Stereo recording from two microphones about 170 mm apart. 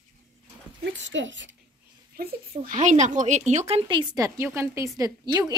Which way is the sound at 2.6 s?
45° right (ahead or behind).